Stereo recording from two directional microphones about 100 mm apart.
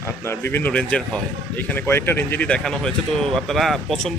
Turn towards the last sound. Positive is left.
turn(degrees=0)  # may be behind; listen again after turning